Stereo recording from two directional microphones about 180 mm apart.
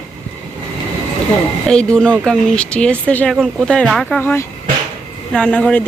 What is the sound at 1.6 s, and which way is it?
Speech, 5° left (ahead or behind).